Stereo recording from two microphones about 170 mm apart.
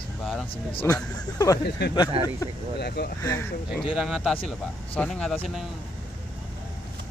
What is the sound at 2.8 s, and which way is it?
Speech, 70° left (ahead or behind).